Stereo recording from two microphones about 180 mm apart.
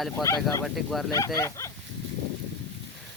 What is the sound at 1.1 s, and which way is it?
Speech, 15° left (ahead or behind).